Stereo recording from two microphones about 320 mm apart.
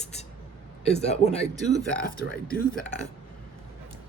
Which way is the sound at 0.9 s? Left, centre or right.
Centre.